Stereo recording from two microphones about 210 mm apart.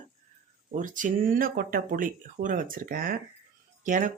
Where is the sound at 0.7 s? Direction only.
40° right (ahead or behind).